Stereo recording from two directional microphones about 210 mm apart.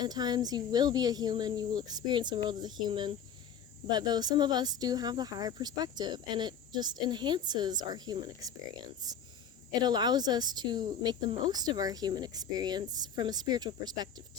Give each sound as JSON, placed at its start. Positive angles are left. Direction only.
{"t": 0.0, "sound": "speech", "side_deg": -20}
{"t": 9.8, "sound": "speech", "side_deg": -20}